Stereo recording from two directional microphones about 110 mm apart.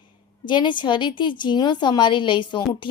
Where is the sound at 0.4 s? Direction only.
45° left (ahead or behind).